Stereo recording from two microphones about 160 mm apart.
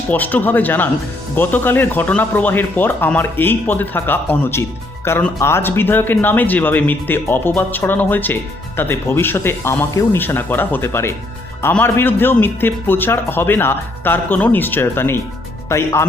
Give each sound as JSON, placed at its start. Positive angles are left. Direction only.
{"t": 0.1, "sound": "speech", "side_deg": 10}